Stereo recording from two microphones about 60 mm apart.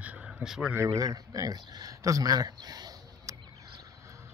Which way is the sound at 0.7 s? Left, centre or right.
Right.